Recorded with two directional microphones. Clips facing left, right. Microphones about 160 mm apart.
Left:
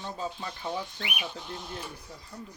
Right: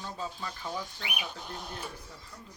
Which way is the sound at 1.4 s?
45° right (ahead or behind).